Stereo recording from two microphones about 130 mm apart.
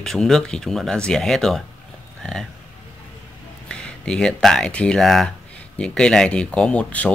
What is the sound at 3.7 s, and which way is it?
Speech, 5° left (ahead or behind).